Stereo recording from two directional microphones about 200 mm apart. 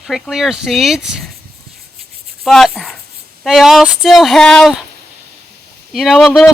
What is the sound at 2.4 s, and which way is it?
A woman's voice, centre (ahead or behind).